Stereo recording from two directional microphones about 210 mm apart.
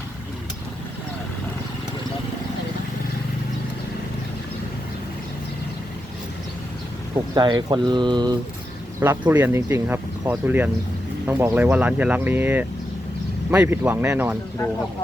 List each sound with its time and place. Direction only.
7.3 s speech: 20° right (ahead or behind)
9.0 s speech: 10° right (ahead or behind)